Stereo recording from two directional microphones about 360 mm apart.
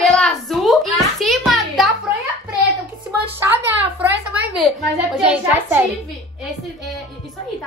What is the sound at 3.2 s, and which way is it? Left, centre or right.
Speech, centre.